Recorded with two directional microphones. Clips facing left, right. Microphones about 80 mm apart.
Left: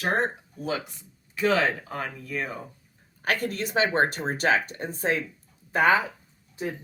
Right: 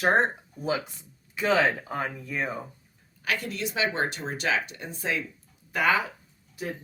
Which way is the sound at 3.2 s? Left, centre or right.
Left.